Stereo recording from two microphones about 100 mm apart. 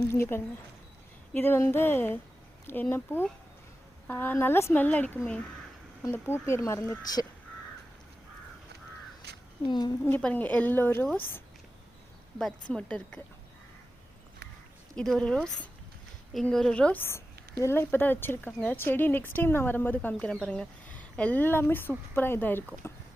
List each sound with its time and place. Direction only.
0.1 s speech: 25° left (ahead or behind)
9.6 s a woman's voice: 45° left (ahead or behind)
10.2 s speech: 15° left (ahead or behind)
12.4 s speech: 5° left (ahead or behind)
14.9 s speech: 5° left (ahead or behind)